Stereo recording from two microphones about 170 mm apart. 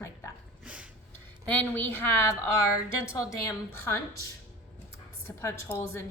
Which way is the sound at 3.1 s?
20° left (ahead or behind).